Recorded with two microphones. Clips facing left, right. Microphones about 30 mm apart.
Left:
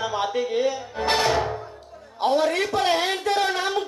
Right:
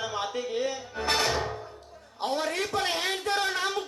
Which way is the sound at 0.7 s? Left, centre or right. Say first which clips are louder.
Left 5 dB; centre.